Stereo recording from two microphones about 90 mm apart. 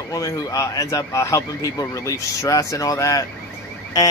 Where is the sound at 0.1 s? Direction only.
40° left (ahead or behind).